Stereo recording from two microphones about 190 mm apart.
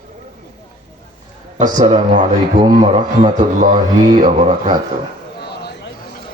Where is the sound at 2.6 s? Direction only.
20° right (ahead or behind).